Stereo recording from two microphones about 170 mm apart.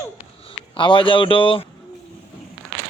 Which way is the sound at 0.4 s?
30° left (ahead or behind).